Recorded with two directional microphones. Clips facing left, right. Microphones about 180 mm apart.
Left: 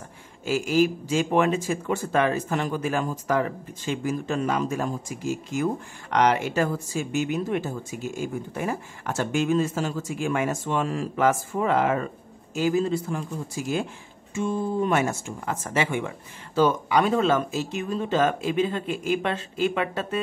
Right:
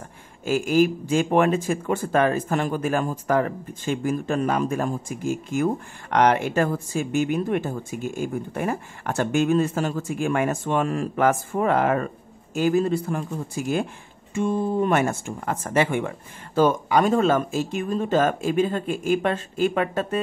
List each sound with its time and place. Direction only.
0.5 s speech: 50° right (ahead or behind)
14.3 s speech: 55° right (ahead or behind)